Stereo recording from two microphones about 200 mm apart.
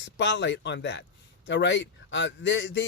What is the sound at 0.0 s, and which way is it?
Speech, 65° left (ahead or behind).